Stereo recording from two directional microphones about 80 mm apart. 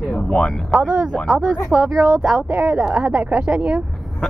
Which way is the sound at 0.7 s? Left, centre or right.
Centre.